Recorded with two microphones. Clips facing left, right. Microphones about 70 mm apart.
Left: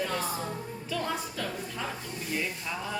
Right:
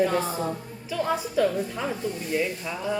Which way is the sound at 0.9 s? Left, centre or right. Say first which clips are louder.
Right 8 dB; centre.